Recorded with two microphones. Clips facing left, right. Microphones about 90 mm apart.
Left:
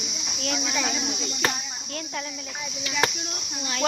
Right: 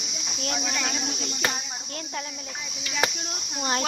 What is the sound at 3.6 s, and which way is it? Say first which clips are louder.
Speech: right 1 dB; 35° right (ahead or behind).